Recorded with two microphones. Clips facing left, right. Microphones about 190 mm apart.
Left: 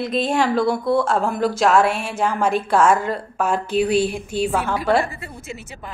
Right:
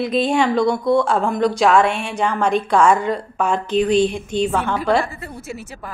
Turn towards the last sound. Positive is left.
turn(degrees=5)  # may be behind; listen again after turning